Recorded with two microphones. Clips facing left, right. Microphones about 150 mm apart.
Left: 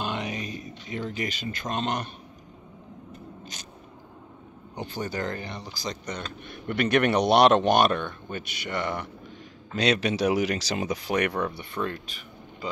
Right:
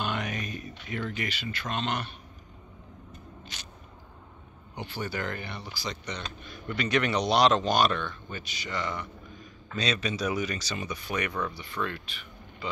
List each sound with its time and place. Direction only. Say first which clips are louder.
0.0 s mantra: left 1 dB; 30° left (ahead or behind)
0.8 s speech: left 2 dB; 30° left (ahead or behind)
3.5 s a sound: left 2 dB; 40° left (ahead or behind)
4.7 s speech: left 3 dB; 45° left (ahead or behind)
6.4 s speech: left 6 dB; 60° left (ahead or behind)
11.8 s speech: left 2 dB; 40° left (ahead or behind)